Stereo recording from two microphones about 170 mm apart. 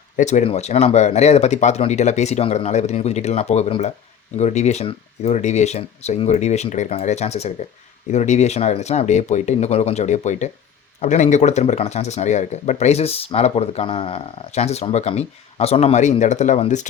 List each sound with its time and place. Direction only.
0.2 s speech: 45° left (ahead or behind)